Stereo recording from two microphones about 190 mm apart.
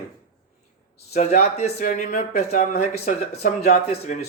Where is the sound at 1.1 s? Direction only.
35° left (ahead or behind).